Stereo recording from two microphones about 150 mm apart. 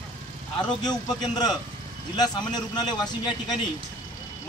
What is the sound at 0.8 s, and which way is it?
Speech, 25° left (ahead or behind).